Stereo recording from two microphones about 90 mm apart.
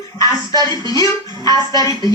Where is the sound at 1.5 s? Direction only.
50° right (ahead or behind).